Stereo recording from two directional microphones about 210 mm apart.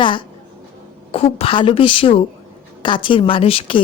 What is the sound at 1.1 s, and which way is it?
A woman's voice, 25° left (ahead or behind).